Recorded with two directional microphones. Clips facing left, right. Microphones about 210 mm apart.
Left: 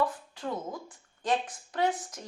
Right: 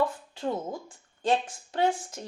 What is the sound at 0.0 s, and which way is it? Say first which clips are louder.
A woman's voice: right 3 dB; 25° right (ahead or behind).